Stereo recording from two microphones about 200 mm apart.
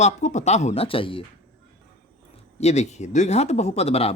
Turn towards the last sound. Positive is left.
turn(degrees=30)  # may be behind; listen again after turning